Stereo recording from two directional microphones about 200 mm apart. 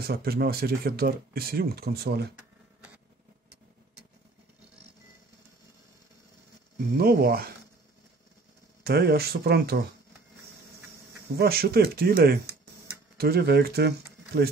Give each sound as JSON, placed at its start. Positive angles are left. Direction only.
{"t": 0.0, "sound": "speech", "side_deg": -50}
{"t": 7.0, "sound": "speech", "side_deg": -50}
{"t": 8.8, "sound": "speech", "side_deg": -55}
{"t": 11.3, "sound": "speech", "side_deg": -50}